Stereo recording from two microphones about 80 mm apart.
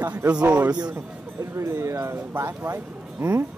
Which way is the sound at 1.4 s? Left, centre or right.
Right.